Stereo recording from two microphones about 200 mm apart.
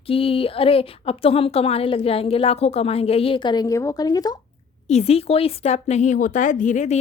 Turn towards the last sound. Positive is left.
turn(degrees=35)  # may be behind; listen again after turning